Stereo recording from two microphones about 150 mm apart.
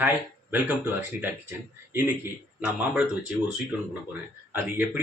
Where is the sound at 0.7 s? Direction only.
10° right (ahead or behind).